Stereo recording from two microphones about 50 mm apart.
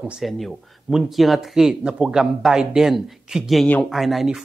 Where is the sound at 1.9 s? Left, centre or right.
Centre.